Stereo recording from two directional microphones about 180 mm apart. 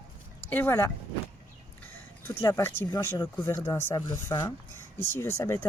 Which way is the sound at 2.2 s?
15° left (ahead or behind).